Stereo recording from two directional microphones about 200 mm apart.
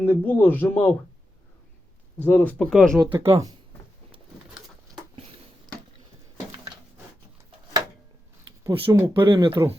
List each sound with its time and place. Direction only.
0.0 s speech: 10° left (ahead or behind)
2.1 s speech: 5° left (ahead or behind)
3.1 s speech: 15° right (ahead or behind)
8.6 s speech: 15° right (ahead or behind)